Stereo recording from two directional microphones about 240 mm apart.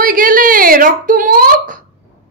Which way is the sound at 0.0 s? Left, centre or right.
Right.